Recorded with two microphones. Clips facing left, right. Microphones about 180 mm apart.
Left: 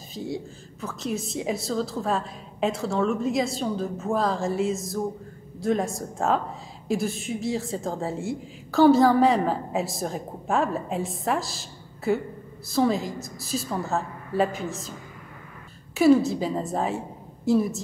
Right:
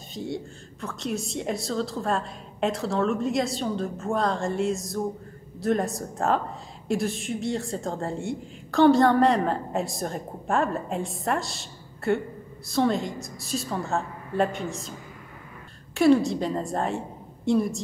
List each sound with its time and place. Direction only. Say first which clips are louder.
0.1 s a woman's voice: even; centre (ahead or behind)